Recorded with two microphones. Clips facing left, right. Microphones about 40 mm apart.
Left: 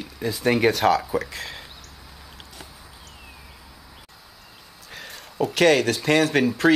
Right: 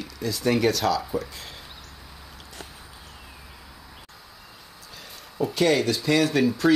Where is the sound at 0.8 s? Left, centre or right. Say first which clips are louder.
Left 4 dB; left.